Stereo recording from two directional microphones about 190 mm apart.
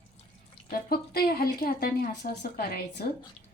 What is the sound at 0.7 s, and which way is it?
Speech, 55° left (ahead or behind).